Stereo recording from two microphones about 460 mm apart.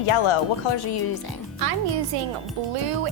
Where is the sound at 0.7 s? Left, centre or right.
Left.